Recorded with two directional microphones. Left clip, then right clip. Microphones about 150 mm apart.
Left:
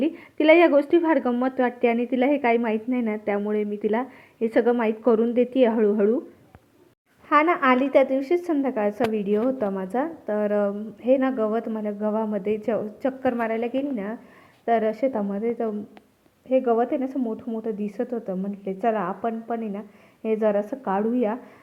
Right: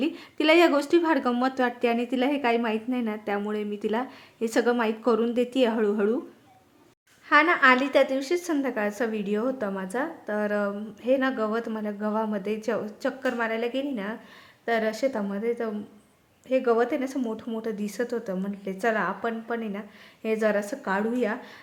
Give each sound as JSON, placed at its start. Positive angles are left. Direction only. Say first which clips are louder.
{"t": 0.0, "sound": "a woman's voice", "louder": "left 4 dB", "side_deg": 5}
{"t": 7.4, "sound": "a woman's voice", "louder": "right 1 dB", "side_deg": 0}
{"t": 7.9, "sound": "a woman's voice", "louder": "left 3 dB", "side_deg": 10}
{"t": 14.6, "sound": "speech", "louder": "left 4 dB", "side_deg": 20}
{"t": 15.0, "sound": "a woman's voice", "louder": "left 2 dB", "side_deg": 10}
{"t": 16.6, "sound": "a woman's voice", "louder": "right 1 dB", "side_deg": -5}
{"t": 16.9, "sound": "a woman's voice", "louder": "left 2 dB", "side_deg": 10}
{"t": 17.2, "sound": "speech", "louder": "left 2 dB", "side_deg": -5}
{"t": 17.6, "sound": "a woman's voice", "louder": "left 1 dB", "side_deg": 10}
{"t": 18.1, "sound": "a woman's voice", "louder": "left 1 dB", "side_deg": -5}
{"t": 18.6, "sound": "a woman's voice", "louder": "left 2 dB", "side_deg": 5}